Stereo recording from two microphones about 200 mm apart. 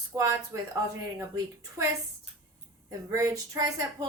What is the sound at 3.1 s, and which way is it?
Speech, 15° right (ahead or behind).